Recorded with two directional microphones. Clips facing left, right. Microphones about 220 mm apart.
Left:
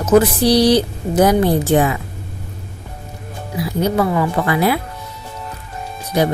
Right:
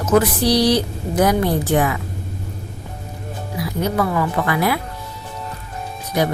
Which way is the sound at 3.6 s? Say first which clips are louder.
Left 3 dB; 25° left (ahead or behind).